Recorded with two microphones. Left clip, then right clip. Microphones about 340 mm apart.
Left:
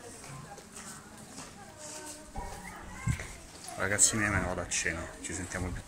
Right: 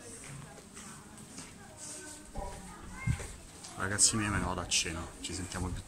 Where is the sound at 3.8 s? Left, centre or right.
Centre.